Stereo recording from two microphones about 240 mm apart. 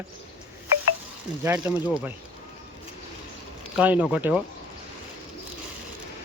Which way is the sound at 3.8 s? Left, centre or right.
Centre.